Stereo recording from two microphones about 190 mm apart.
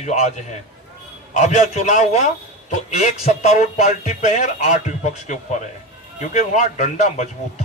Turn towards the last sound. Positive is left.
turn(degrees=40)  # may be behind; listen again after turning